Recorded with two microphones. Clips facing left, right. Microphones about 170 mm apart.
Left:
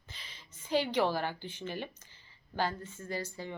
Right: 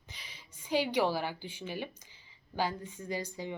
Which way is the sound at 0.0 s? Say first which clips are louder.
Even; 15° right (ahead or behind).